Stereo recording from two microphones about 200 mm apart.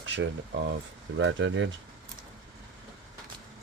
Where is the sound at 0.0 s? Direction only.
65° right (ahead or behind).